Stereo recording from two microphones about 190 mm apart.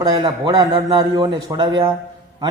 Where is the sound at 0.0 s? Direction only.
20° right (ahead or behind).